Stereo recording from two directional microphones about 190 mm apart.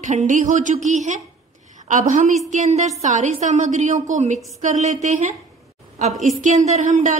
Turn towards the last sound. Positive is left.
turn(degrees=-40)  # may be behind; listen again after turning